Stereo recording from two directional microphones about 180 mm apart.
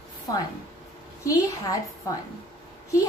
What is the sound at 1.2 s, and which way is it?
Speech, 20° left (ahead or behind).